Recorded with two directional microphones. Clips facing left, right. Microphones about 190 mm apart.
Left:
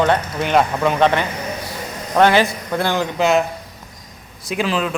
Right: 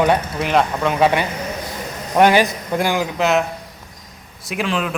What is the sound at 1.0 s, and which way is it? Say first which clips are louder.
A man's voice: even; 10° right (ahead or behind).